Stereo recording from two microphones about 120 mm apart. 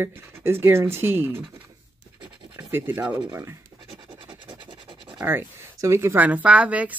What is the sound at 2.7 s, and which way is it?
Speech, 15° right (ahead or behind).